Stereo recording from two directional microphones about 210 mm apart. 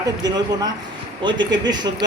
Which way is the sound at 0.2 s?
20° right (ahead or behind).